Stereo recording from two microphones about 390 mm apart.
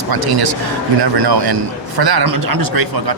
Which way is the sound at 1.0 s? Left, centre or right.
Right.